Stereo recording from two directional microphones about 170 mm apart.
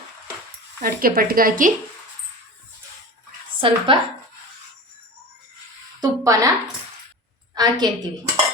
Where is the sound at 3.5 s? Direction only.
30° right (ahead or behind).